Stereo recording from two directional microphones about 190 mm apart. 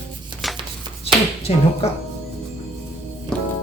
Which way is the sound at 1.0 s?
30° left (ahead or behind).